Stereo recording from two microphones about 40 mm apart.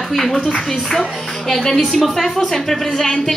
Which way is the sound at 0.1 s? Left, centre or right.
Centre.